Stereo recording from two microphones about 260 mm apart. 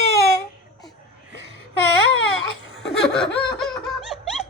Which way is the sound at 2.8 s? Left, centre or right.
Centre.